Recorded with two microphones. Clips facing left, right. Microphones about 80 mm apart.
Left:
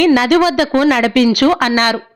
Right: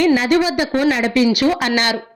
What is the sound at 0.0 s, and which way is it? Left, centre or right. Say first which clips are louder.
A woman's voice: left 4 dB; left.